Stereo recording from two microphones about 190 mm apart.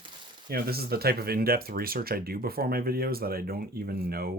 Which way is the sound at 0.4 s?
50° right (ahead or behind).